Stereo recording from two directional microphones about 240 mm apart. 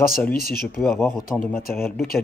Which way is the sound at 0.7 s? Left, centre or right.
Centre.